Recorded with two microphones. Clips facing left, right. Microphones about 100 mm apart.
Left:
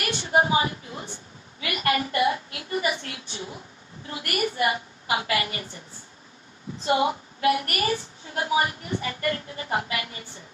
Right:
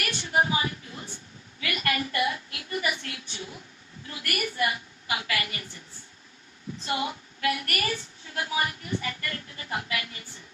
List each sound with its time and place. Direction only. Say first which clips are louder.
0.0 s a woman's voice: left 3 dB; 30° left (ahead or behind)
6.8 s a woman's voice: left 8 dB; 30° left (ahead or behind)